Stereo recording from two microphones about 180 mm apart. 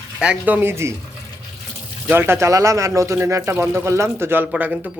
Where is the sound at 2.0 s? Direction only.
15° right (ahead or behind).